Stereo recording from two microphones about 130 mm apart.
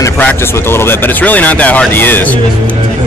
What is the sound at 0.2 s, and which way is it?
Speech, 15° left (ahead or behind).